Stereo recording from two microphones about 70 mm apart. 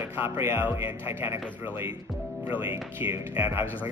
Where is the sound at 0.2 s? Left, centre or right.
Right.